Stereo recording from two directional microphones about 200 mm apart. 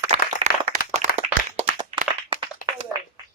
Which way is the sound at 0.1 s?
35° right (ahead or behind).